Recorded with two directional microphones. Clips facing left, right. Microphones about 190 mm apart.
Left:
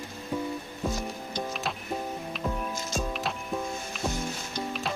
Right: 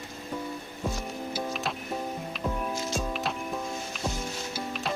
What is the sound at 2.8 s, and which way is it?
Music, 45° left (ahead or behind).